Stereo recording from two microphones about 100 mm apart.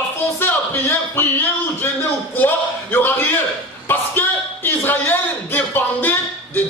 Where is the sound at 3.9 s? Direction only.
20° left (ahead or behind).